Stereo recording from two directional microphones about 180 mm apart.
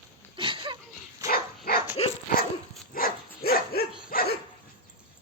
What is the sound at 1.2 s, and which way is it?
Dog, 55° left (ahead or behind).